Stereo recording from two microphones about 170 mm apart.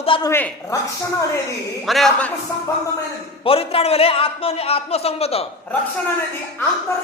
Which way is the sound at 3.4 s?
35° left (ahead or behind).